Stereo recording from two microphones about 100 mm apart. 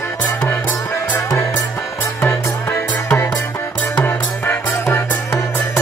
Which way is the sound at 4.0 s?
20° left (ahead or behind).